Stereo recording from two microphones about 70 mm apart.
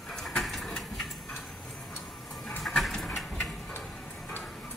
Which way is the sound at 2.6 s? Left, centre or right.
Centre.